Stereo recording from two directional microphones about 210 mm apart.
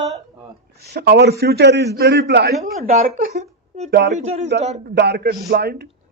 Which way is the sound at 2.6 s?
35° right (ahead or behind).